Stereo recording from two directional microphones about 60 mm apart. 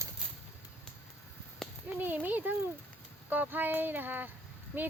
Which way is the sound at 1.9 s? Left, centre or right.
Right.